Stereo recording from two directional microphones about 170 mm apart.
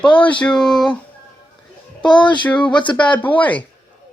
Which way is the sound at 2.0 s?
5° left (ahead or behind).